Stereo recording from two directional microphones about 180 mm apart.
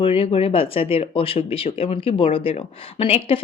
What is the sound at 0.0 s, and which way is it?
Speech, 30° left (ahead or behind).